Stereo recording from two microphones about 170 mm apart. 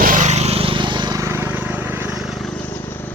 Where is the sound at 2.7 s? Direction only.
15° left (ahead or behind).